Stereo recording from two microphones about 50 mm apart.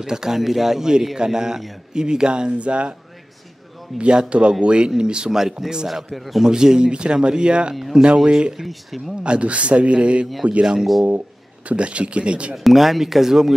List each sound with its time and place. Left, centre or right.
0.0 s speech: centre
4.0 s speech: right; by 6.4 s centre
6.4 s speech: centre
8.5 s speech: centre
9.2 s speech: right
11.1 s speech: right
12.5 s speech: centre